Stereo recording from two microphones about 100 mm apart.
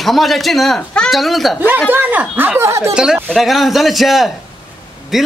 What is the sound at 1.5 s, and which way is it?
Speech, 20° right (ahead or behind).